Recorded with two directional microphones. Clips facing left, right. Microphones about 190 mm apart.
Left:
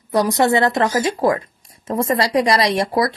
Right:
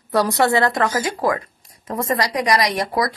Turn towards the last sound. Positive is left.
turn(degrees=25)  # may be behind; listen again after turning